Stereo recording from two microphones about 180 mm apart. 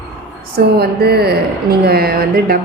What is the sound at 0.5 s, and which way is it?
A woman's voice, 60° right (ahead or behind).